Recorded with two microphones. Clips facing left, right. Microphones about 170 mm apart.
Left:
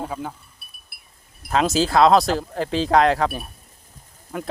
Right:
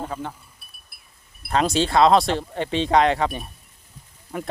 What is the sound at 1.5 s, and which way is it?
Speech, centre (ahead or behind).